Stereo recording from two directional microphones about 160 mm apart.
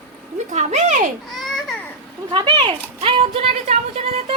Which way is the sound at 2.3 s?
30° right (ahead or behind).